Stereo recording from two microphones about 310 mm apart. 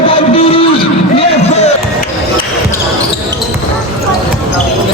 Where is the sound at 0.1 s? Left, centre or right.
Centre.